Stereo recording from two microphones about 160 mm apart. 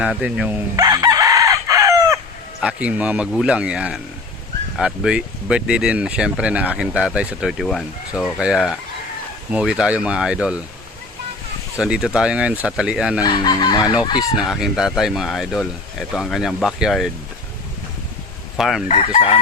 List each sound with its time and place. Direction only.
0.0 s speech: 5° right (ahead or behind)
0.8 s chicken: 25° right (ahead or behind)
2.6 s speech: 5° right (ahead or behind)
11.8 s speech: 5° right (ahead or behind)
13.2 s chicken: 30° left (ahead or behind)
14.2 s speech: centre (ahead or behind)
18.5 s speech: centre (ahead or behind)
18.9 s chicken: 40° left (ahead or behind)